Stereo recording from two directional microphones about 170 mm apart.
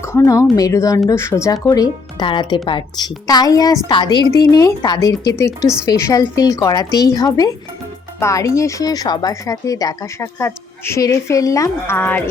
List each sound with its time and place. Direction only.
0.0 s speech: 20° left (ahead or behind)
5.5 s speech: 5° right (ahead or behind)
5.8 s speech: 20° left (ahead or behind)